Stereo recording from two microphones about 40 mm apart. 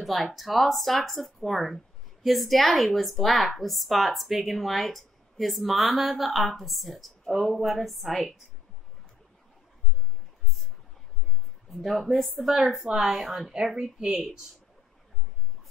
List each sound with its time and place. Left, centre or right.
0.0 s speech: centre
11.7 s speech: centre
13.7 s speech: centre